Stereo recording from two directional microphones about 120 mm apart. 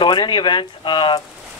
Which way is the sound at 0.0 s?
40° left (ahead or behind).